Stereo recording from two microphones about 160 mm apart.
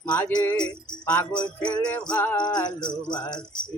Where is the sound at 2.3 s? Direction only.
25° left (ahead or behind).